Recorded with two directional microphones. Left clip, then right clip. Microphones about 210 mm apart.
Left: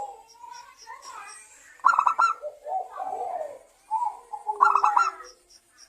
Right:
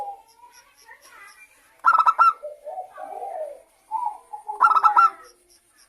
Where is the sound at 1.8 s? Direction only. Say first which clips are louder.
Right 4 dB; 15° right (ahead or behind).